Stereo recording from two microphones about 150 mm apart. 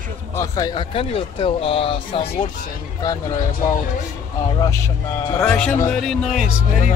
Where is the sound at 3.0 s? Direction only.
25° left (ahead or behind).